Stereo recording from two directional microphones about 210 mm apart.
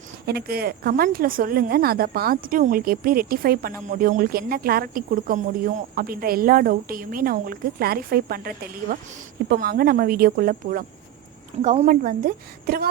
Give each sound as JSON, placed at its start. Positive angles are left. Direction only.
{"t": 0.3, "sound": "a woman's voice", "side_deg": -50}